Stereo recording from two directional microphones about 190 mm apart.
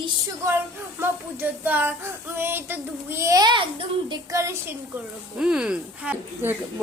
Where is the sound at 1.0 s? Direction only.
10° right (ahead or behind).